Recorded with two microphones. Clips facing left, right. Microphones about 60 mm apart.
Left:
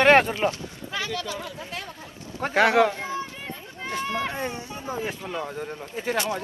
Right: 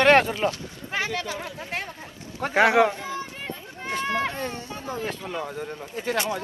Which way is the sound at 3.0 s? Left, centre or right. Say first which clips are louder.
Left 1 dB; left.